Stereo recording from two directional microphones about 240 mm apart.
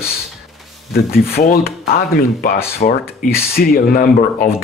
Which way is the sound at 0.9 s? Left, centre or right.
Left.